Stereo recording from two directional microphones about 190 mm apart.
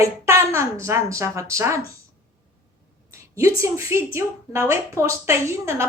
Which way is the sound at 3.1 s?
15° right (ahead or behind).